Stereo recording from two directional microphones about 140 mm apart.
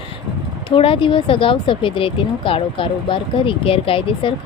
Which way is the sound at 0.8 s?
40° left (ahead or behind).